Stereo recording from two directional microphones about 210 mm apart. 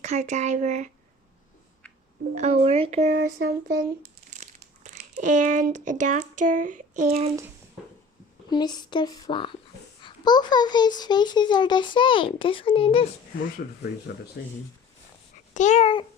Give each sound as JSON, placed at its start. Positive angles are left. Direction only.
{"t": 0.0, "sound": "speech", "side_deg": -35}
{"t": 2.3, "sound": "speech", "side_deg": -30}
{"t": 3.4, "sound": "speech", "side_deg": -45}
{"t": 4.3, "sound": "crumpling", "side_deg": -35}
{"t": 6.4, "sound": "a sound", "side_deg": -35}
{"t": 8.4, "sound": "a child's voice", "side_deg": 20}
{"t": 14.1, "sound": "speech", "side_deg": 50}
{"t": 15.5, "sound": "a child's voice", "side_deg": 35}